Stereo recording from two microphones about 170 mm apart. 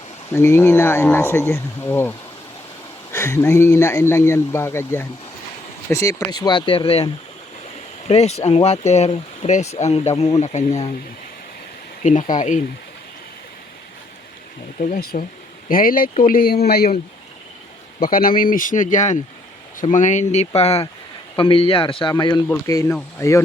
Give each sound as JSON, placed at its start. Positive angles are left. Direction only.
{"t": 0.3, "sound": "speech", "side_deg": 15}
{"t": 12.0, "sound": "speech", "side_deg": 45}
{"t": 14.8, "sound": "speech", "side_deg": 45}
{"t": 15.7, "sound": "speech", "side_deg": 55}
{"t": 18.0, "sound": "speech", "side_deg": 60}
{"t": 22.4, "sound": "speech", "side_deg": 15}